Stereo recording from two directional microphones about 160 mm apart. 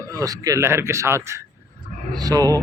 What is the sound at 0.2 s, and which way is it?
Speech, 20° right (ahead or behind).